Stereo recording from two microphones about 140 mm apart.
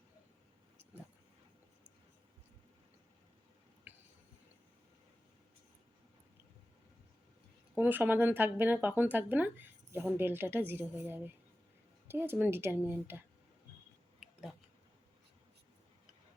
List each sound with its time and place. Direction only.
7.8 s speech: 15° right (ahead or behind)